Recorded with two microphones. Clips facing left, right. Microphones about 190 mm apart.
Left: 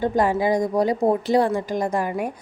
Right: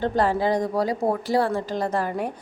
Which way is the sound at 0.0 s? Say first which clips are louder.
Left 2 dB; 10° left (ahead or behind).